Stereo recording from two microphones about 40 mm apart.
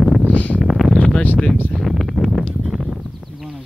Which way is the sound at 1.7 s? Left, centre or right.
Centre.